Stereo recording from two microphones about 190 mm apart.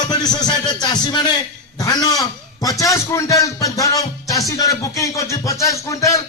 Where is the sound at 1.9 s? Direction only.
20° left (ahead or behind).